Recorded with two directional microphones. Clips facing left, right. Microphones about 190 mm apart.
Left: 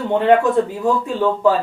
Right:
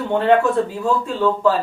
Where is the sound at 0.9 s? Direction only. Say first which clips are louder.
Left 1 dB; 15° left (ahead or behind).